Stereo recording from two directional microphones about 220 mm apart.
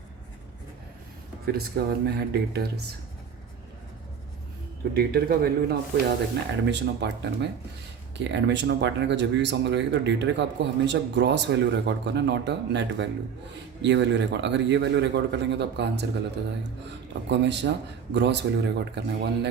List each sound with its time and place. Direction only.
1.5 s speech: 45° right (ahead or behind)
4.9 s speech: 45° right (ahead or behind)
17.2 s speech: 55° right (ahead or behind)